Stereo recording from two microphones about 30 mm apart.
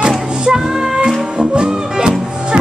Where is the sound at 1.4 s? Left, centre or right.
Right.